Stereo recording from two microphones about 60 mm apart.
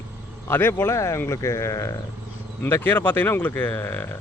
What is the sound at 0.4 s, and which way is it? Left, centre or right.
Speech, left.